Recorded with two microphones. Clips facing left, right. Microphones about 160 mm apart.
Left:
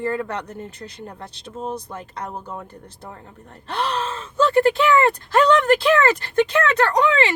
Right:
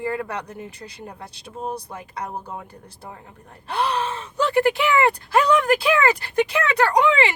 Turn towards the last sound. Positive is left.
turn(degrees=-15)  # may be behind; listen again after turning